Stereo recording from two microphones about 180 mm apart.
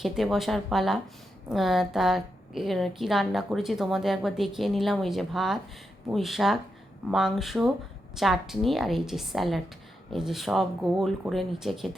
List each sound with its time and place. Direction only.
0.0 s a woman's voice: centre (ahead or behind)